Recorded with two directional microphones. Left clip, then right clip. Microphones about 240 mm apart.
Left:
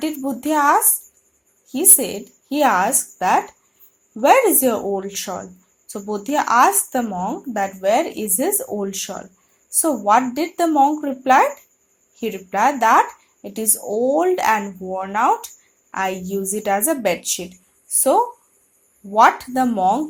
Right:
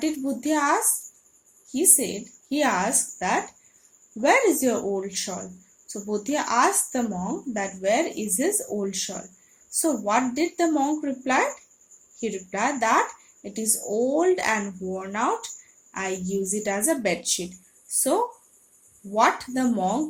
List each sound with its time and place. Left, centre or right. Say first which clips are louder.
0.0 s a woman's voice: left 3 dB; centre
7.8 s a woman's voice: left 5 dB; left
17.8 s a sound: left 8 dB; centre
19.1 s a woman's voice: left 8 dB; left